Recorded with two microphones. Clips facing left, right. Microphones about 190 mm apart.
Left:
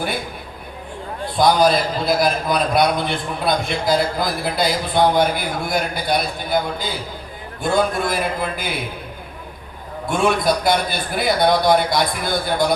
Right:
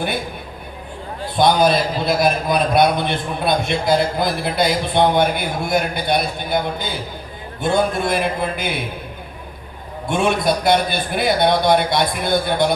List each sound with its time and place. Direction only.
1.4 s a man's voice: 25° right (ahead or behind)
10.1 s a man's voice: 25° right (ahead or behind)